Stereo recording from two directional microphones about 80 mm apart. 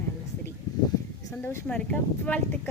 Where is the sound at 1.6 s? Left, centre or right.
Centre.